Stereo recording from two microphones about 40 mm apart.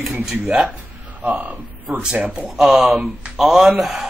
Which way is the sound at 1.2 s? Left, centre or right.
Right.